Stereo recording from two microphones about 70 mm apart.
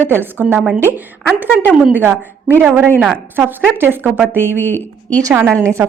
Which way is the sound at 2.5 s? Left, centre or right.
Right.